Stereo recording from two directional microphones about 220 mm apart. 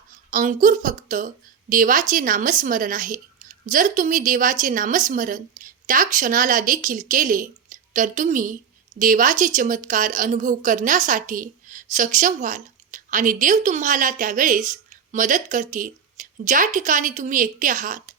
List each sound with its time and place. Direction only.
0.3 s a woman's voice: 35° right (ahead or behind)